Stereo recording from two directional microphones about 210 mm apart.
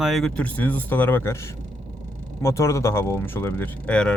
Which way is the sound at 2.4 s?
15° left (ahead or behind).